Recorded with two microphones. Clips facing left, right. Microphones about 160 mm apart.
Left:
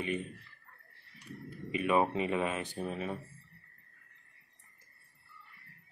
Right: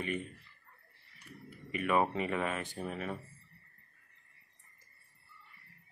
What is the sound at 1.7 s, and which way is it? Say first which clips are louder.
Speech: left 2 dB; 20° left (ahead or behind).